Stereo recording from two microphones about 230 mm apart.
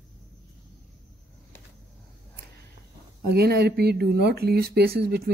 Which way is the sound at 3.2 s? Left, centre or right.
Right.